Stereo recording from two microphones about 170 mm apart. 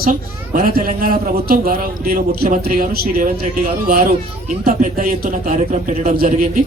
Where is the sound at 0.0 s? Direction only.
55° right (ahead or behind).